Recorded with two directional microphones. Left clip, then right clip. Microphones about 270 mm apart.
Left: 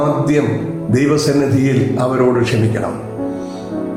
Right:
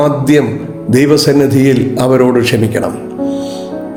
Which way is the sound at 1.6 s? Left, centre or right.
Right.